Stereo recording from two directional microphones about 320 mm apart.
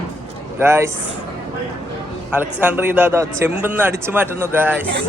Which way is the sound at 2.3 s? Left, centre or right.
Centre.